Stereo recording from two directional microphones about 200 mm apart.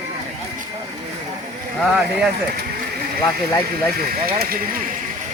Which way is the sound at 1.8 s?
Centre (ahead or behind).